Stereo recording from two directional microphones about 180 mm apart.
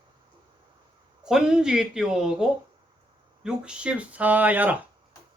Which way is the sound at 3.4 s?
5° right (ahead or behind).